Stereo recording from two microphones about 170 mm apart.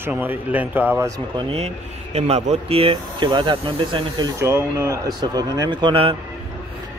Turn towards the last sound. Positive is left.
turn(degrees=-30)  # may be behind; listen again after turning